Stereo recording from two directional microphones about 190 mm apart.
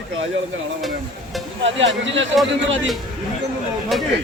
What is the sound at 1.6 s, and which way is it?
Speech, 75° right (ahead or behind).